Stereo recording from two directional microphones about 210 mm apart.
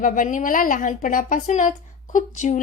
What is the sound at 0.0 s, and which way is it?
A woman's voice, 40° left (ahead or behind).